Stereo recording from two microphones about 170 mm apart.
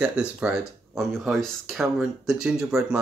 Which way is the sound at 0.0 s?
5° right (ahead or behind).